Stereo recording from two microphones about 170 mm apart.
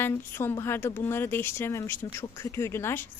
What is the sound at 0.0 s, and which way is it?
A woman's voice, 15° left (ahead or behind).